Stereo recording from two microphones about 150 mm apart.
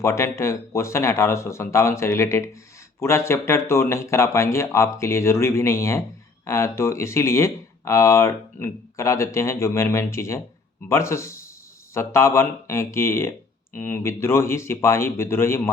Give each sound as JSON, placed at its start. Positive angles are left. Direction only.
{"t": 0.0, "sound": "speech", "side_deg": 20}